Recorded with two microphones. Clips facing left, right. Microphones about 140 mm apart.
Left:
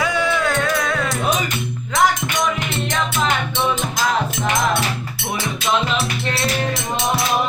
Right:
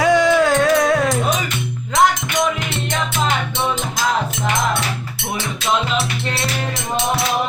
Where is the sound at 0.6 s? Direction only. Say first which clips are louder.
Right 6 dB; 35° right (ahead or behind).